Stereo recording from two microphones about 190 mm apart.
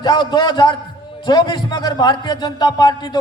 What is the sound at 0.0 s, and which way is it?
A man's voice, 20° left (ahead or behind).